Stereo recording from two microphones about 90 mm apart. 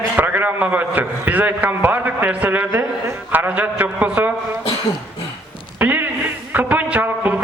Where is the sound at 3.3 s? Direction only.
20° right (ahead or behind).